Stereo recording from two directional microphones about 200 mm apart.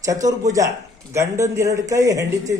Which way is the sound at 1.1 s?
15° right (ahead or behind).